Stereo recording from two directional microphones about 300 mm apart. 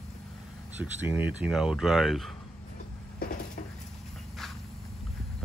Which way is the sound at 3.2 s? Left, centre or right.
Left.